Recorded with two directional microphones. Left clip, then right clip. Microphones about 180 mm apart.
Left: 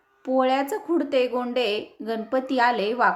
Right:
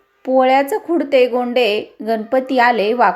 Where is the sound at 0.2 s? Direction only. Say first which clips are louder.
Right 9 dB; 15° right (ahead or behind).